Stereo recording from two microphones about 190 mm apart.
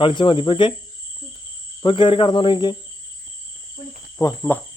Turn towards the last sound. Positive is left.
turn(degrees=15)  # may be behind; listen again after turning